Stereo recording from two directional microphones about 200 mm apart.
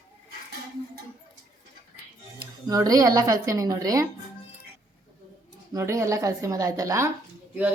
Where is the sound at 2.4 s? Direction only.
20° right (ahead or behind).